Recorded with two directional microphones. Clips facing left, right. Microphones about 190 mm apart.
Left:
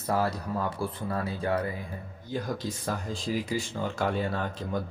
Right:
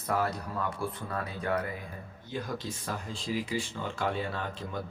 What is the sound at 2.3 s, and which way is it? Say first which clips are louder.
Speech: left 4 dB; 40° left (ahead or behind).